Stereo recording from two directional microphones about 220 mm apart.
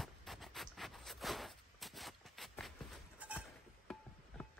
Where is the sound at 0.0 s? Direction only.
Centre (ahead or behind).